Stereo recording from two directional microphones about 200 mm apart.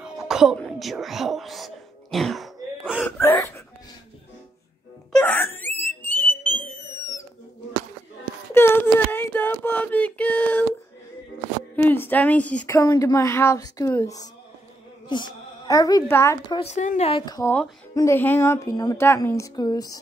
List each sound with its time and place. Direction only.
0.0 s whispering: 5° right (ahead or behind)
3.1 s a woman's voice: 10° left (ahead or behind)
5.1 s wail: 10° left (ahead or behind)
6.0 s whistle: 10° left (ahead or behind)
8.5 s child singing: 10° left (ahead or behind)
11.7 s a woman's voice: 10° left (ahead or behind)
16.5 s a woman's voice: 35° left (ahead or behind); by 20.0 s 20° left (ahead or behind)